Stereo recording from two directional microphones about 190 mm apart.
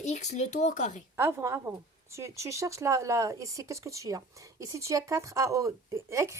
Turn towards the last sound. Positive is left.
turn(degrees=-15)  # may be behind; listen again after turning